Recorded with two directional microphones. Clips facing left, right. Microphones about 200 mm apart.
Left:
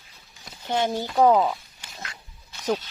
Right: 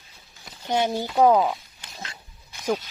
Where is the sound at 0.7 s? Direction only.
15° right (ahead or behind).